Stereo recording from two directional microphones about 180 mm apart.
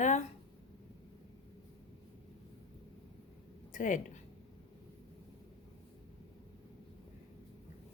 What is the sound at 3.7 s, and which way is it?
Speech, 45° left (ahead or behind).